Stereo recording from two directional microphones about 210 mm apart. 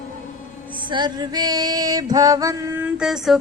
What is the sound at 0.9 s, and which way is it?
Female singing, 20° right (ahead or behind).